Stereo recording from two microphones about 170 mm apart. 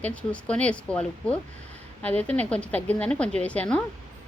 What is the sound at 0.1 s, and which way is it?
Speech, 5° left (ahead or behind).